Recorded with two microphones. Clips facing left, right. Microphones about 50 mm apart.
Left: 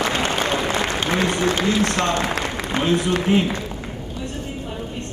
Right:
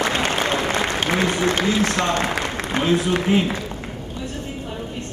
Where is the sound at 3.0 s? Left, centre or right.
Centre.